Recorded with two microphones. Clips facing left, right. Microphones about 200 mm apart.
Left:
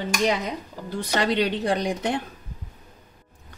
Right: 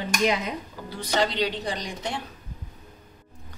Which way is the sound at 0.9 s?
55° left (ahead or behind).